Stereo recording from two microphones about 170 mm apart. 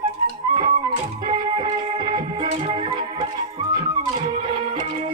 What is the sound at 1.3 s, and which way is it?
Music, 30° right (ahead or behind).